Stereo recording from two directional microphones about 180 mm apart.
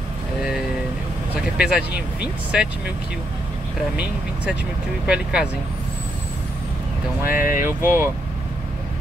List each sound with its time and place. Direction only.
1.6 s speech: 5° right (ahead or behind)
5.0 s speech: 5° right (ahead or behind)
7.2 s speech: 50° left (ahead or behind)
7.6 s speech: 15° right (ahead or behind)